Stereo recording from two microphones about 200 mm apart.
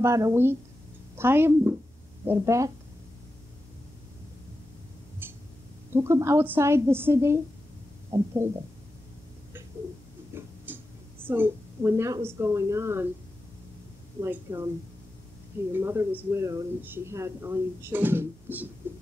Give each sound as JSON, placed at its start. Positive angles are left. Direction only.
{"t": 0.0, "sound": "speech", "side_deg": -15}
{"t": 5.2, "sound": "a sound", "side_deg": -10}
{"t": 5.9, "sound": "speech", "side_deg": -15}
{"t": 10.3, "sound": "tick-tock", "side_deg": -10}
{"t": 11.2, "sound": "speech", "side_deg": -10}
{"t": 14.2, "sound": "speech", "side_deg": -15}
{"t": 15.7, "sound": "speech", "side_deg": -10}